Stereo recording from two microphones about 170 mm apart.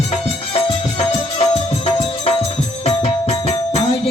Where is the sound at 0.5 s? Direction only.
35° left (ahead or behind).